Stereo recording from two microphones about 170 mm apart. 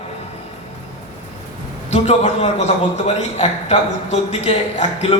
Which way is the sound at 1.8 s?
40° left (ahead or behind).